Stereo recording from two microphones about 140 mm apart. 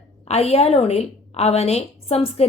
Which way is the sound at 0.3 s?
50° left (ahead or behind).